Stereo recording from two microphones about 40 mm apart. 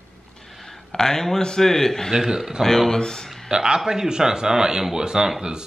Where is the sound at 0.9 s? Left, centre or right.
Centre.